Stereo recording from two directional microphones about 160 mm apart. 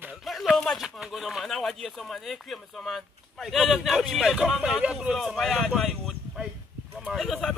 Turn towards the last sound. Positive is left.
turn(degrees=5)  # may be behind; listen again after turning